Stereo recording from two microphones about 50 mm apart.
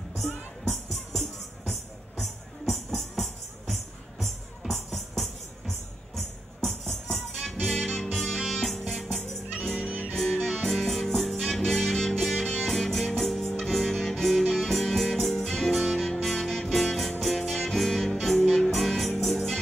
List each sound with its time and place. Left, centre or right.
0.1 s music: centre
9.8 s music: right
10.1 s music: centre